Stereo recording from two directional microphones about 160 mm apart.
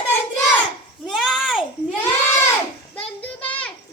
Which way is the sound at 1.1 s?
Centre (ahead or behind).